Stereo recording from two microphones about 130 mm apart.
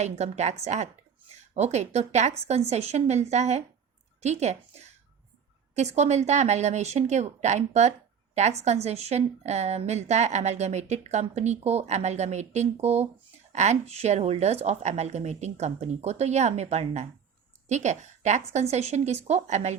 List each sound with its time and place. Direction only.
0.0 s a woman's voice: 60° right (ahead or behind)